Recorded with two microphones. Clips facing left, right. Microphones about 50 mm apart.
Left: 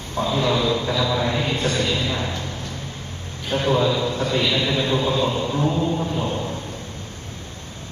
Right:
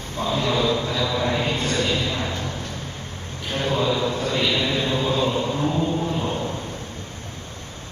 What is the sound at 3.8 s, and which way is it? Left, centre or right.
Speech, centre.